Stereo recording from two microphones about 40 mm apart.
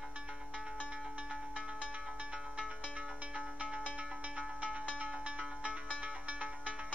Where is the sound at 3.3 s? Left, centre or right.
Right.